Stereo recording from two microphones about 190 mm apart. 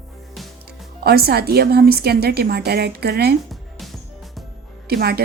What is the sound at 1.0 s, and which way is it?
A woman's voice, 55° right (ahead or behind).